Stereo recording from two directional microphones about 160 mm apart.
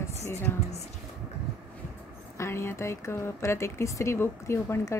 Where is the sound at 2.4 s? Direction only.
15° left (ahead or behind).